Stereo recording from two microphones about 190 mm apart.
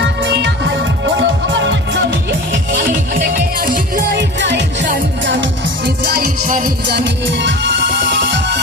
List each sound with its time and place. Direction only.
1.0 s music: 70° right (ahead or behind)
3.2 s music: 45° right (ahead or behind)
4.1 s music: 65° right (ahead or behind)